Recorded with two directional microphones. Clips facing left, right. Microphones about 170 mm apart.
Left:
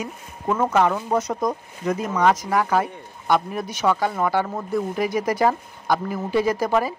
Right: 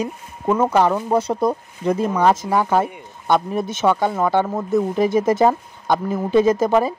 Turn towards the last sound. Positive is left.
turn(degrees=-20)  # may be behind; listen again after turning